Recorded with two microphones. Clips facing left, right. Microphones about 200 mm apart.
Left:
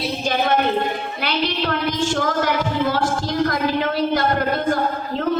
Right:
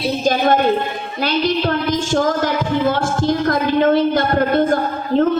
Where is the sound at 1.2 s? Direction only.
45° right (ahead or behind).